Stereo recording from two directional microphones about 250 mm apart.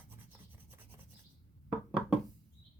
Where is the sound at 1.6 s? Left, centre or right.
Centre.